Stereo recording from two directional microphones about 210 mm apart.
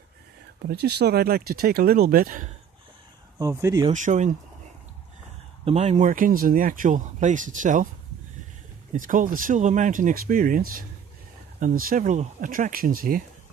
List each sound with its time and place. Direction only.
0.7 s speech: 50° right (ahead or behind)
3.3 s speech: 15° right (ahead or behind)
3.9 s speech: 35° right (ahead or behind)
5.7 s speech: 30° right (ahead or behind)
8.9 s speech: 40° right (ahead or behind)